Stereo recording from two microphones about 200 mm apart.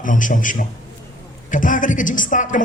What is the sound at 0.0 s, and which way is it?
A man's voice, 40° left (ahead or behind).